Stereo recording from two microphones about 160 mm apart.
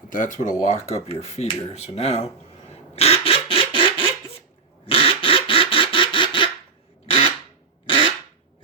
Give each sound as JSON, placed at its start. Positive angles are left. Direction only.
{"t": 0.1, "sound": "speech", "side_deg": 55}
{"t": 0.7, "sound": "speech", "side_deg": 40}
{"t": 4.9, "sound": "quack", "side_deg": 35}
{"t": 7.9, "sound": "a sound", "side_deg": 35}